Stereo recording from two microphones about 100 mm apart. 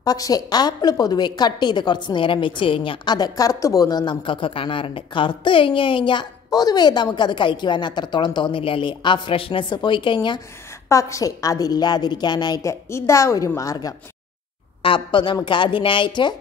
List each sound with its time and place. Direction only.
0.0 s a woman's voice: 40° left (ahead or behind); by 3.2 s 60° left (ahead or behind)
3.2 s speech: 35° left (ahead or behind); by 6.2 s 55° left (ahead or behind)
6.5 s a woman's voice: 40° left (ahead or behind)
10.9 s a woman's voice: 30° left (ahead or behind)
12.9 s a woman's voice: 30° left (ahead or behind)
14.8 s speech: 60° left (ahead or behind)